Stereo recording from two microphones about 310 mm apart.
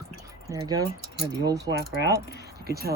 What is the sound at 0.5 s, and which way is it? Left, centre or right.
Speech, centre.